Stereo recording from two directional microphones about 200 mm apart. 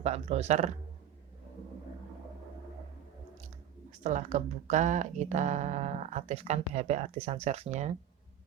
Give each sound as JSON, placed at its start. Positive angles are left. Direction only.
{"t": 0.0, "sound": "speech", "side_deg": -35}
{"t": 4.0, "sound": "speech", "side_deg": -35}